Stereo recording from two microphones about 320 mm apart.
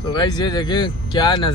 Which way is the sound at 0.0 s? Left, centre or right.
Centre.